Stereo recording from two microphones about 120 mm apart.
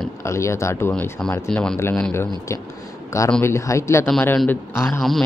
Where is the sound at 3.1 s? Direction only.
25° left (ahead or behind).